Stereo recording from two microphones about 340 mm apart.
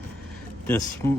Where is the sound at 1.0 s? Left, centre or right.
Centre.